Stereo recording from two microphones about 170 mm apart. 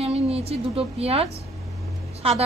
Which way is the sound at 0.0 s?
35° right (ahead or behind).